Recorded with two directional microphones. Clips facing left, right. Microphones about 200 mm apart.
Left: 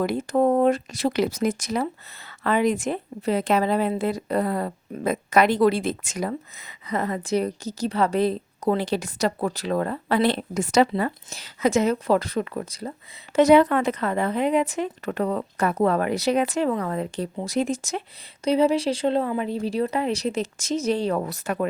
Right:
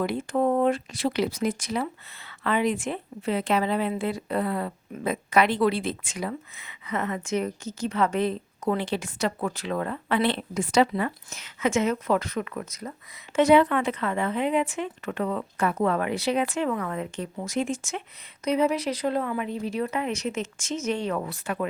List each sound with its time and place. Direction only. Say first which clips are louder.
0.0 s speech: left 4 dB; 40° left (ahead or behind)